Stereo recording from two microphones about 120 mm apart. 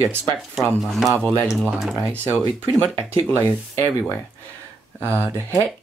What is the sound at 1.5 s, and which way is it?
Speech, centre (ahead or behind).